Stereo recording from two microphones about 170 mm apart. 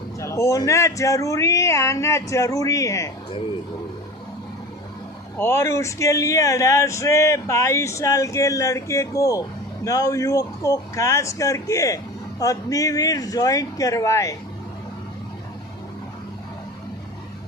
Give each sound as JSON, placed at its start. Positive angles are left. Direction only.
{"t": 0.2, "sound": "speech", "side_deg": 15}
{"t": 5.4, "sound": "speech", "side_deg": 15}